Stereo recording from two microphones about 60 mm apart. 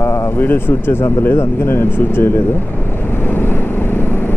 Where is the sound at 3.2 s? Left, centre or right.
Left.